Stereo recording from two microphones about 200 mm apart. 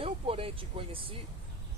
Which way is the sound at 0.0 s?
30° right (ahead or behind).